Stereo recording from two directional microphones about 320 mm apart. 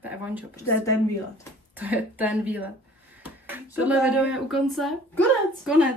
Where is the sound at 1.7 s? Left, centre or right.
Centre.